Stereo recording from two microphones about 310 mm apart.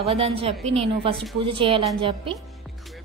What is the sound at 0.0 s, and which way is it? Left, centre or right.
A woman's voice, centre.